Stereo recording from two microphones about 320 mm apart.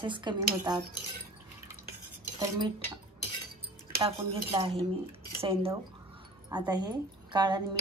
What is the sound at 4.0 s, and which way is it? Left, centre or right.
A woman's voice, centre.